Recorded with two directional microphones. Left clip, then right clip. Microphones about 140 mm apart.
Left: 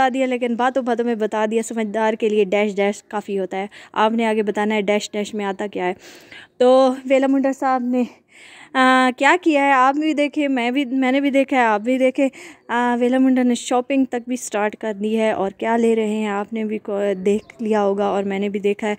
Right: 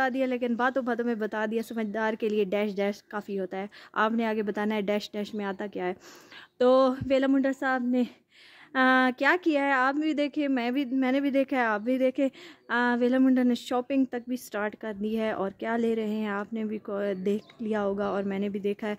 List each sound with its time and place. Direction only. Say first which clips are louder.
0.0 s speech: left 9 dB; 15° left (ahead or behind)
1.2 s speech: left 10 dB; 20° left (ahead or behind)
2.1 s speech: left 10 dB; 10° left (ahead or behind)
12.6 s speech: left 7 dB; 5° left (ahead or behind)
13.2 s speech: left 7 dB; 15° left (ahead or behind)